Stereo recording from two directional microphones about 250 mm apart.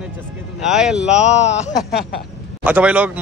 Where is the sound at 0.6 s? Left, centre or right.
Centre.